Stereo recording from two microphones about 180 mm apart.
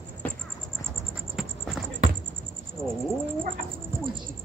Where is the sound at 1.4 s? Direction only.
Centre (ahead or behind).